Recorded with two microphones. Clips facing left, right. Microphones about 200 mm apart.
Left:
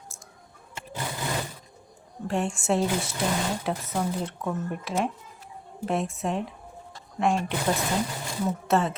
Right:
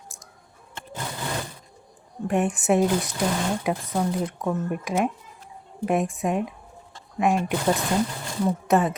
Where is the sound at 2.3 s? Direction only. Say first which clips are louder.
Right 4 dB; 20° right (ahead or behind).